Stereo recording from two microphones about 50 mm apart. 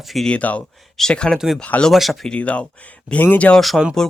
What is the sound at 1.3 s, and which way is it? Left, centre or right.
Speech, centre.